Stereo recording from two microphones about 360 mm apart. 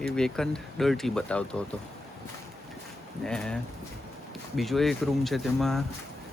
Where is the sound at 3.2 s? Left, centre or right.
Centre.